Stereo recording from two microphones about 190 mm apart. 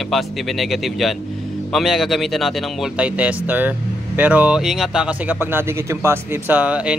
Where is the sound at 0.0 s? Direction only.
Centre (ahead or behind).